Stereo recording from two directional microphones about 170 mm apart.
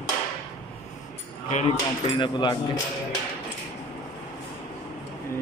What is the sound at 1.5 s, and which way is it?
Speech, 35° left (ahead or behind).